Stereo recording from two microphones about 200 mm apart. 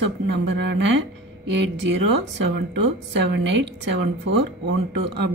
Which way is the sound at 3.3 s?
60° right (ahead or behind).